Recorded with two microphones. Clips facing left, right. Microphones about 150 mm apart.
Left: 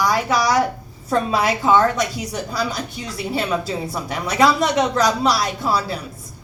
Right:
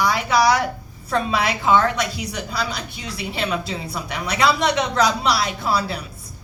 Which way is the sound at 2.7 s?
40° left (ahead or behind).